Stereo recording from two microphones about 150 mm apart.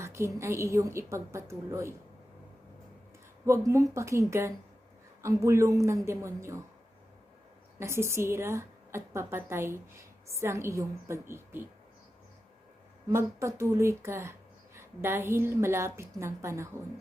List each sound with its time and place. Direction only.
0.0 s a woman's voice: 20° right (ahead or behind)
3.4 s a woman's voice: 20° right (ahead or behind)
7.8 s a woman's voice: 20° right (ahead or behind)
13.1 s a woman's voice: 20° right (ahead or behind)